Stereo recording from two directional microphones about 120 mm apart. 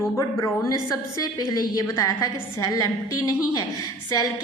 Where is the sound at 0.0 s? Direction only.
25° left (ahead or behind).